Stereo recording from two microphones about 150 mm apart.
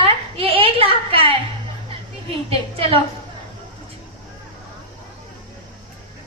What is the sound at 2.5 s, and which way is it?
Speech, 40° right (ahead or behind).